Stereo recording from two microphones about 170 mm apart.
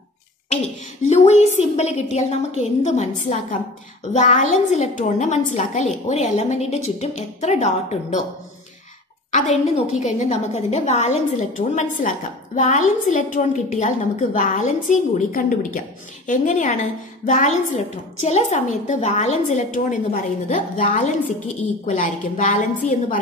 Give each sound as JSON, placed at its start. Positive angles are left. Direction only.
{"t": 1.0, "sound": "a woman's voice", "side_deg": 40}
{"t": 9.3, "sound": "a woman's voice", "side_deg": 45}